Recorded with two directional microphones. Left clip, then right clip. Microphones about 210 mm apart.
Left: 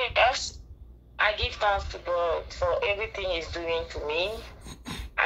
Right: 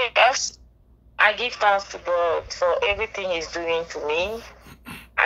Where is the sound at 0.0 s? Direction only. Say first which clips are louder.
Right 5 dB; 45° right (ahead or behind).